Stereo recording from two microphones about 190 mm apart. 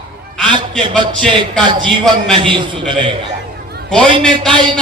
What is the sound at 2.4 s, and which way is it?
Speech, 25° right (ahead or behind).